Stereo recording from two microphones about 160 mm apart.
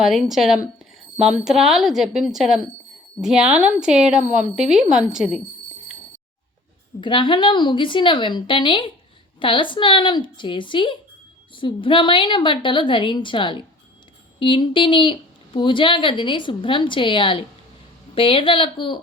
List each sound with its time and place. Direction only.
0.0 s a woman's voice: centre (ahead or behind)
7.0 s a woman's voice: 30° left (ahead or behind)